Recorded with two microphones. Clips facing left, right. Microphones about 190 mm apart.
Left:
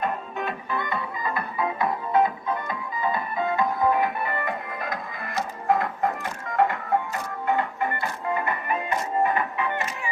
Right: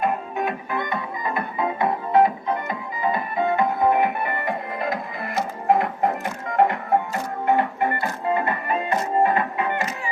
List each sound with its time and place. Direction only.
0.0 s music: 10° right (ahead or behind); by 9.7 s 35° right (ahead or behind)